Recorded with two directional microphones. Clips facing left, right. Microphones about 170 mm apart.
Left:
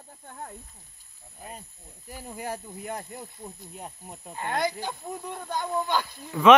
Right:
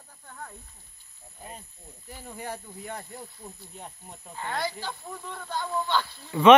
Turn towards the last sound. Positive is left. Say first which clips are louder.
# right 1 dB
turn(degrees=0)  # may be behind; listen again after turning